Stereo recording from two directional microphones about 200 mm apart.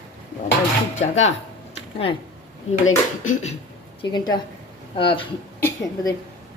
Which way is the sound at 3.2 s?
35° left (ahead or behind).